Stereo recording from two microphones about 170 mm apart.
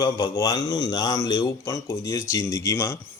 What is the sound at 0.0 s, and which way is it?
Speech, 25° left (ahead or behind).